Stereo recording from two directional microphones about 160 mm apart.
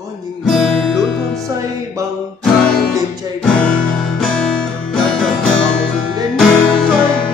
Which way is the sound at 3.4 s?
5° left (ahead or behind).